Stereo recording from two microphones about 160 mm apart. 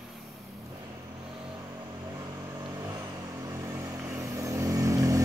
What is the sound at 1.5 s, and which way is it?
Vehicle, 20° right (ahead or behind).